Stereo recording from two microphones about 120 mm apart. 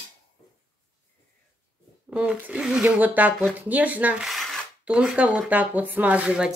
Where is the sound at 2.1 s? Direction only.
10° right (ahead or behind).